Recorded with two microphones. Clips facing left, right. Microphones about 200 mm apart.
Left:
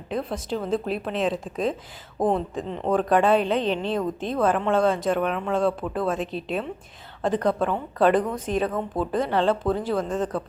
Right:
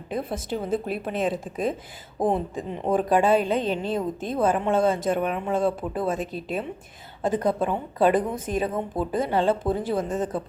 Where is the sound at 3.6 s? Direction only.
45° right (ahead or behind).